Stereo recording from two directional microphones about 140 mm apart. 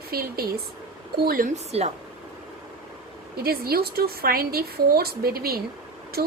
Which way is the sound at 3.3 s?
90° right.